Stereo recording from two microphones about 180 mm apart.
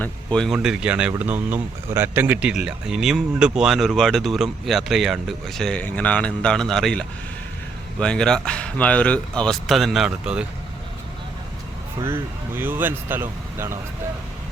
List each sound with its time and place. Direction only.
0.0 s speech: 5° left (ahead or behind)
11.9 s speech: 15° right (ahead or behind)